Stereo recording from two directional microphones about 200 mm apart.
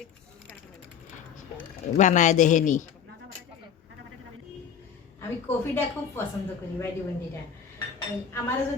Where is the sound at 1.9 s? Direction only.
40° left (ahead or behind).